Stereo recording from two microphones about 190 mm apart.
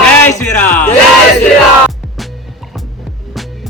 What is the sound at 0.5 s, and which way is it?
Speech, 40° left (ahead or behind).